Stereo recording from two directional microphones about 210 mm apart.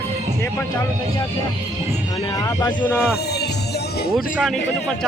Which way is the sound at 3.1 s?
50° left (ahead or behind).